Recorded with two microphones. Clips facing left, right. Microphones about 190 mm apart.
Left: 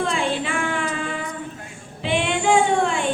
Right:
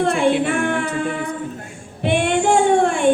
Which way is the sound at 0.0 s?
60° right (ahead or behind).